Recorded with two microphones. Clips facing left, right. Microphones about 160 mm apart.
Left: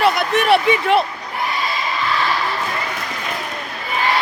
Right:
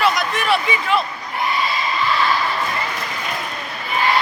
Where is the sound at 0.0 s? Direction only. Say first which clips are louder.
Left 3 dB; 55° left (ahead or behind).